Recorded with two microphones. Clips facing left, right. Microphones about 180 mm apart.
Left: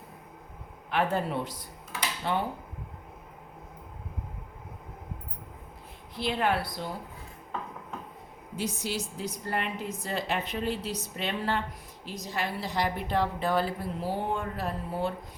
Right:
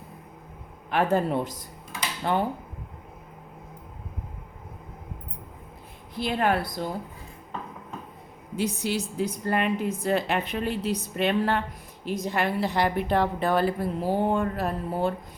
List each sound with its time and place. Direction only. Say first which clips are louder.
0.9 s a woman's voice: right 5 dB; 45° right (ahead or behind)
6.1 s a woman's voice: right 3 dB; 50° right (ahead or behind)
8.5 s a woman's voice: right 5 dB; 60° right (ahead or behind)